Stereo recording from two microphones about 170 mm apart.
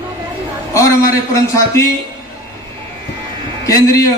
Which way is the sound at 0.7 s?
15° left (ahead or behind).